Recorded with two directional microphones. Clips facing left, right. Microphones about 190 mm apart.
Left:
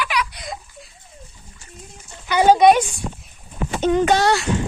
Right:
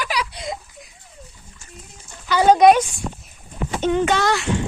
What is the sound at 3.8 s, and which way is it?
Speech, 40° left (ahead or behind).